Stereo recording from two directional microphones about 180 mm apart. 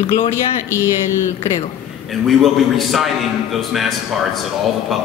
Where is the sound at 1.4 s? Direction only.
30° left (ahead or behind).